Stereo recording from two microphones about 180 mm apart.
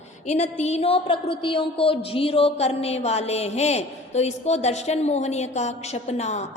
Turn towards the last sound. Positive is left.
turn(degrees=40)  # may be behind; listen again after turning